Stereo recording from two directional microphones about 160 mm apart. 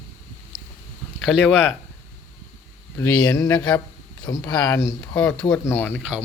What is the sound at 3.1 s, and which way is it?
Speech, 20° left (ahead or behind).